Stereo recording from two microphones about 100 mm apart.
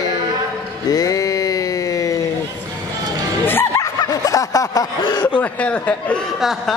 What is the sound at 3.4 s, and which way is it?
Music, 25° left (ahead or behind).